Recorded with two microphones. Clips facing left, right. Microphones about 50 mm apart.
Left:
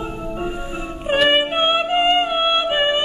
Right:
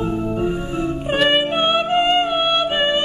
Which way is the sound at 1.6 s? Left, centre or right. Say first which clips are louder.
Even; centre.